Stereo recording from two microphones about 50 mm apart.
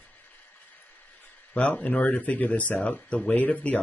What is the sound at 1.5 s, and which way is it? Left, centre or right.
Speech, left.